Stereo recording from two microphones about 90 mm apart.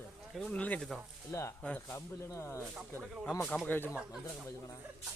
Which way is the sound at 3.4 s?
15° left (ahead or behind).